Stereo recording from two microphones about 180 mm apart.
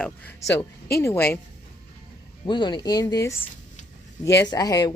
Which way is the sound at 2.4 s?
25° left (ahead or behind).